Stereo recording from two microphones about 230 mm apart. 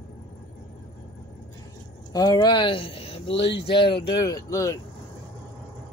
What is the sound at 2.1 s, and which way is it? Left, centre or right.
Speech, centre.